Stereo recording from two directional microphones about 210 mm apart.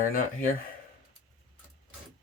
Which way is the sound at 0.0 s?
40° left (ahead or behind).